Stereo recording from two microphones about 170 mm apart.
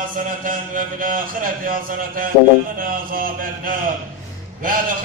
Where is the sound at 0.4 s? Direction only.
55° right (ahead or behind).